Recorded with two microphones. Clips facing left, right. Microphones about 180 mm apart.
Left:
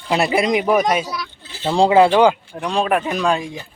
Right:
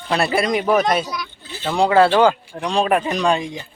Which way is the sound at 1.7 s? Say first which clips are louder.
Left 3 dB; 30° left (ahead or behind).